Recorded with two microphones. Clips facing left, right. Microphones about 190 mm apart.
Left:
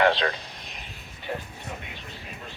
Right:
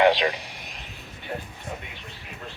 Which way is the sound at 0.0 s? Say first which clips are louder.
Right 3 dB; 15° right (ahead or behind).